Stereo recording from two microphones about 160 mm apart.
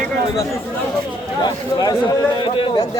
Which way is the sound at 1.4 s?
25° left (ahead or behind).